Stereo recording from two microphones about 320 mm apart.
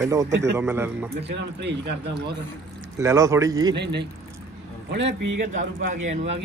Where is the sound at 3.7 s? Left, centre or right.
Right.